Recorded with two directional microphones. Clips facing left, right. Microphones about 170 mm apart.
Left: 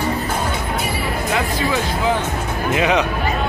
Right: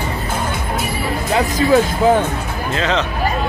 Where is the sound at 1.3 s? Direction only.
40° right (ahead or behind).